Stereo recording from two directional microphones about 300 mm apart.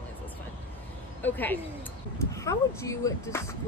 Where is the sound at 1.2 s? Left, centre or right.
Centre.